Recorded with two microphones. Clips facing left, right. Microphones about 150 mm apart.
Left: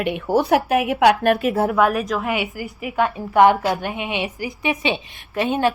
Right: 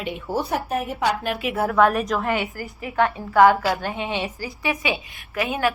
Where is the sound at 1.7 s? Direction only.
5° left (ahead or behind).